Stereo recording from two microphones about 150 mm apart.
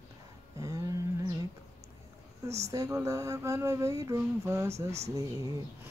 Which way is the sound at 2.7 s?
20° right (ahead or behind).